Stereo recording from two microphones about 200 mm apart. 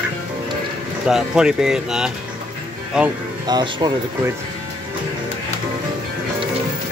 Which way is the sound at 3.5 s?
20° right (ahead or behind).